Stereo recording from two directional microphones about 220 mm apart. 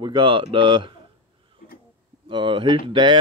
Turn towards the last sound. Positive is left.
turn(degrees=-20)  # may be behind; listen again after turning